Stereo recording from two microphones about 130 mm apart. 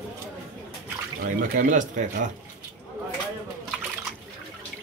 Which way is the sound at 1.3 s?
80° right.